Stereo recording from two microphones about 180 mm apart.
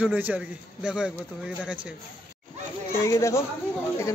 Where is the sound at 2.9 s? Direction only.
15° left (ahead or behind).